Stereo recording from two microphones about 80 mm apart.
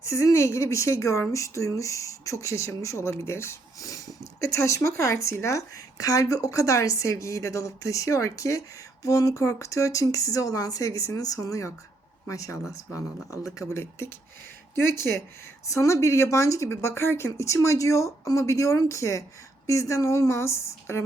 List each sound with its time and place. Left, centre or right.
0.0 s speech: left
15.6 s speech: left